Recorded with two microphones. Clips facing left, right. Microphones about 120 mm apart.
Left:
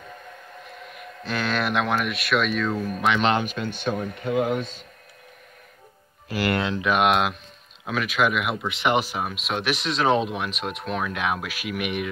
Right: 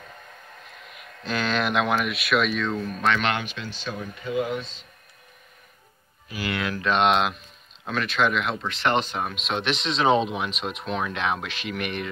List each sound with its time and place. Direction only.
0.9 s speech: centre (ahead or behind)
3.2 s speech: 30° left (ahead or behind)
3.4 s speech: 50° left (ahead or behind)
6.2 s speech: 75° left (ahead or behind)
6.6 s speech: 25° left (ahead or behind)
6.9 s speech: 5° left (ahead or behind)